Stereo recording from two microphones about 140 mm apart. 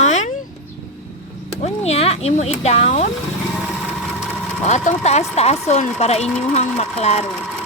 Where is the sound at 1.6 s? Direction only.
50° left (ahead or behind).